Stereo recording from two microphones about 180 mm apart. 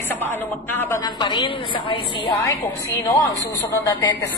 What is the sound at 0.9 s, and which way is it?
Speech, 25° left (ahead or behind).